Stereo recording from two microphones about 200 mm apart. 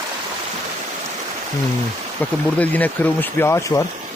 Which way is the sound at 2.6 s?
10° left (ahead or behind).